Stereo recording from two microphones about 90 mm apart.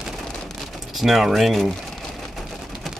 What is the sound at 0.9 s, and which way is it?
Speech, 5° right (ahead or behind).